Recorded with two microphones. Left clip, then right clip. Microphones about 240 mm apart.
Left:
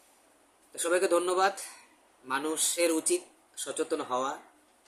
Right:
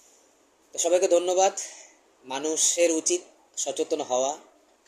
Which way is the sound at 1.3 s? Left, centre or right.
Left.